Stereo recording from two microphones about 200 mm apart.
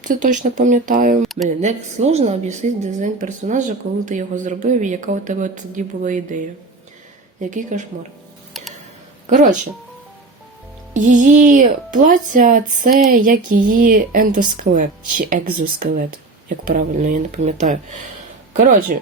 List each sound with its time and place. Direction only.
0.0 s a woman's voice: 40° right (ahead or behind)
1.2 s speech: centre (ahead or behind)
1.5 s a woman's voice: 35° right (ahead or behind)
10.9 s a woman's voice: 40° right (ahead or behind)